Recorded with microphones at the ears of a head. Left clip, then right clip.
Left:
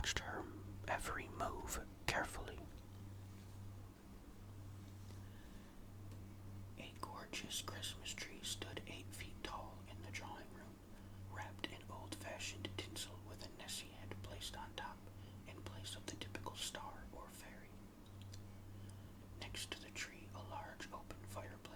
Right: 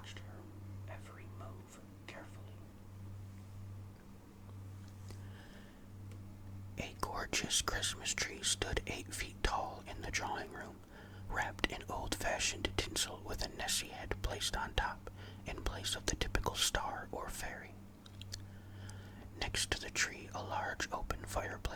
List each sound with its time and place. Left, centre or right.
0.0 s whispering: left
6.7 s speech: right
19.4 s speech: right